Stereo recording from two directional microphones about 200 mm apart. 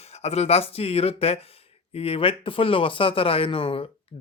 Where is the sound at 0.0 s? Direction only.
30° left (ahead or behind).